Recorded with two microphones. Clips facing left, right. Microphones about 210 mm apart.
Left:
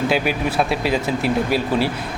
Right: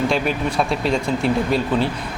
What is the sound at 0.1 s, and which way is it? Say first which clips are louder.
Speech: left 1 dB; 5° left (ahead or behind).